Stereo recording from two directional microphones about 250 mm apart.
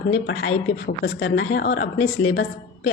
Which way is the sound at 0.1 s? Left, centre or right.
Left.